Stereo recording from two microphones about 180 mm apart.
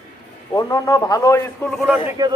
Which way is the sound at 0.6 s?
20° left (ahead or behind).